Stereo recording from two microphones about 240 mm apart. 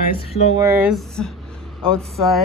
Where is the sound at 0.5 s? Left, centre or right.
Centre.